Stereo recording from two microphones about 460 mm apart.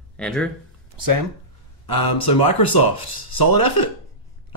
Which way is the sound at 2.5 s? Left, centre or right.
Left.